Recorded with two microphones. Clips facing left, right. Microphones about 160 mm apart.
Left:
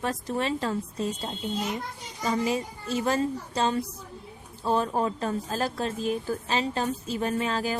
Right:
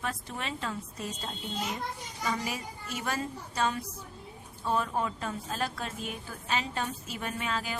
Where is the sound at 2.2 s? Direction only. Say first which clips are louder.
Left 7 dB; 25° left (ahead or behind).